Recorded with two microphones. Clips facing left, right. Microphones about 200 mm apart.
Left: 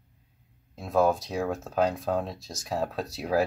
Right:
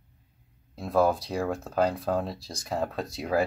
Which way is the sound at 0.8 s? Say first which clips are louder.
Even; centre (ahead or behind).